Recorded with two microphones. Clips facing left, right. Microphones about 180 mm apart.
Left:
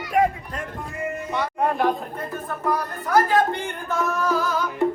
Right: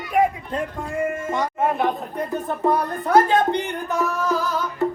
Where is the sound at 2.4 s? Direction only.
25° right (ahead or behind).